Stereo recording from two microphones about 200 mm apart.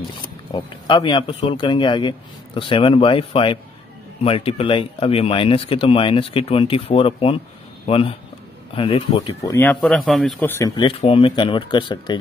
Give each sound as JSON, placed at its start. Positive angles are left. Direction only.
{"t": 0.5, "sound": "speech", "side_deg": 25}
{"t": 10.5, "sound": "speech", "side_deg": 15}
{"t": 10.9, "sound": "speech", "side_deg": 25}